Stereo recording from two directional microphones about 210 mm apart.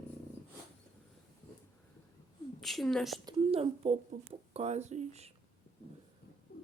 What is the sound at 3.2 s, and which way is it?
Speech, 30° right (ahead or behind).